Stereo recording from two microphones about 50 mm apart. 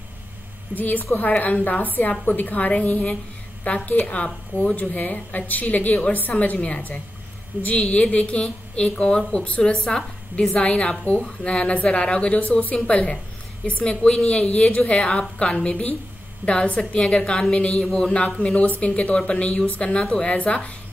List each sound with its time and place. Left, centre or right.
0.7 s a woman's voice: left
17.8 s speech: centre
18.4 s a woman's voice: left